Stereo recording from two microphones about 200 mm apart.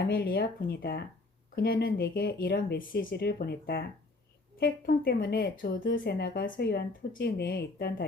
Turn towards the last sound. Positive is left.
turn(degrees=50)  # may be behind; listen again after turning